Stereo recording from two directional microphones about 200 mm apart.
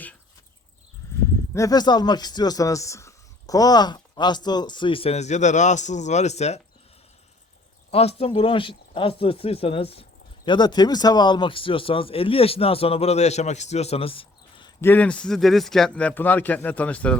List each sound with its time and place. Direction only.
1.5 s speech: 20° left (ahead or behind); by 6.6 s 35° left (ahead or behind)
7.9 s speech: 30° left (ahead or behind)
14.8 s speech: 10° left (ahead or behind)